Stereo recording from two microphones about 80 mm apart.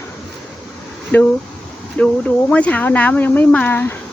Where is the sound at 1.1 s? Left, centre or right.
Left.